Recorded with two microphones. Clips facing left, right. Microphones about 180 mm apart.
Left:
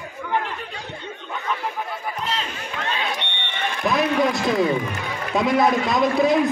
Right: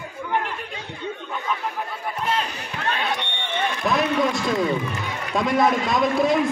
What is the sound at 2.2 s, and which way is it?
Speech, 50° right (ahead or behind).